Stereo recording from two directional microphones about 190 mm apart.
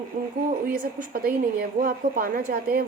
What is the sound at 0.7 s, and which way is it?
A woman's voice, 50° right (ahead or behind).